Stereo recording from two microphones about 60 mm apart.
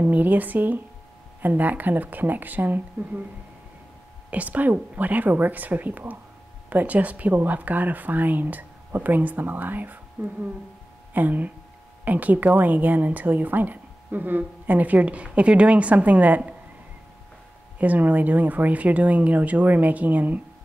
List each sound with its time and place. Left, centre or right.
0.0 s speech: right
4.3 s speech: right
17.7 s speech: right